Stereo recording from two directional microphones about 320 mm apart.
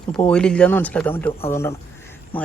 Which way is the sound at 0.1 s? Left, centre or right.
Centre.